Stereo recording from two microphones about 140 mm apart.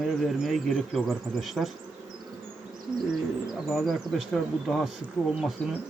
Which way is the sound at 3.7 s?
Centre (ahead or behind).